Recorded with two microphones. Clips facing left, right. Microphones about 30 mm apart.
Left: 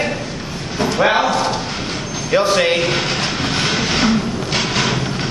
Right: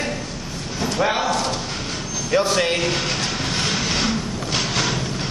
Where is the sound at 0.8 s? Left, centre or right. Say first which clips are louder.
Left 5 dB; left.